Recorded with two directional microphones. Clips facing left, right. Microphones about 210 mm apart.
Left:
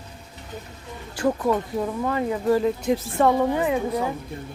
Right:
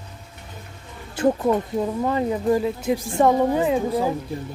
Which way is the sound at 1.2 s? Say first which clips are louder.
Right 3 dB; 20° right (ahead or behind).